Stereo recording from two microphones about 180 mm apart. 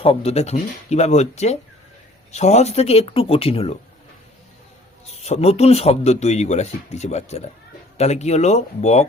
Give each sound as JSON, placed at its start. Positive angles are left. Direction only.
{"t": 0.0, "sound": "speech", "side_deg": 30}
{"t": 5.0, "sound": "speech", "side_deg": 35}